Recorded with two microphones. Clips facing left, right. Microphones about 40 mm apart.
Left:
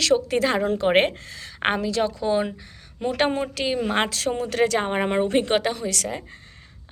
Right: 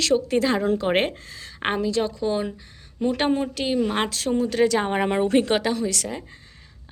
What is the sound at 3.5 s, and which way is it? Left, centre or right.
A woman's voice, left.